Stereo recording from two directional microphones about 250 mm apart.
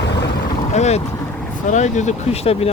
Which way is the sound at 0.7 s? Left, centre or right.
Left.